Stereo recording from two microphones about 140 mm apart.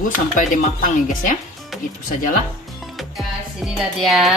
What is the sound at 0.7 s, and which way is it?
Speech, 70° left (ahead or behind).